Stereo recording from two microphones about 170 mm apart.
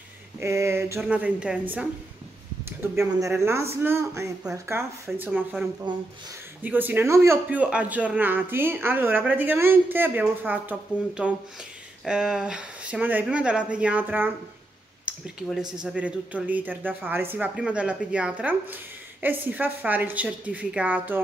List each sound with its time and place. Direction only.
0.4 s a man's voice: 15° right (ahead or behind)
15.1 s a sound: 5° right (ahead or behind)
15.8 s a man's voice: 5° right (ahead or behind)